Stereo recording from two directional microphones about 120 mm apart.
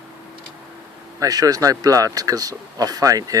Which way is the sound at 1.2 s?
30° right (ahead or behind).